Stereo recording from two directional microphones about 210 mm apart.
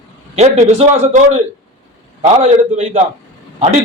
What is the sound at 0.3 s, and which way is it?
A man's voice, 35° right (ahead or behind).